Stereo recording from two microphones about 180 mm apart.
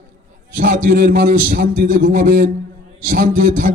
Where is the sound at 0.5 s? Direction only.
45° right (ahead or behind).